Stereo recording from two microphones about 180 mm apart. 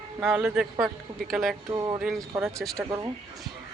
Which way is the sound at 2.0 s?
Centre (ahead or behind).